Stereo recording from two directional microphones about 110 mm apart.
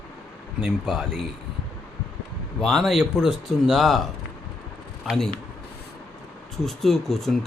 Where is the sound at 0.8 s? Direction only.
Centre (ahead or behind).